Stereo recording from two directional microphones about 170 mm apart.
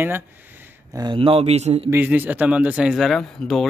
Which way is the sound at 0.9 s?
25° right (ahead or behind).